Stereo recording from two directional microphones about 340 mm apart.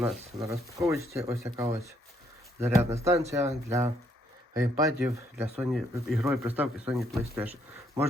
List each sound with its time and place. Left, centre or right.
0.0 s speech: centre